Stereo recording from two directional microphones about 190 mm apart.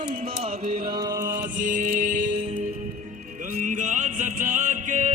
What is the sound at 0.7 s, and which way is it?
Music, 20° right (ahead or behind).